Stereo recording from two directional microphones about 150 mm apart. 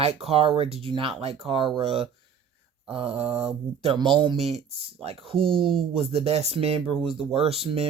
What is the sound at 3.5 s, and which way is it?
Speech, 40° right (ahead or behind).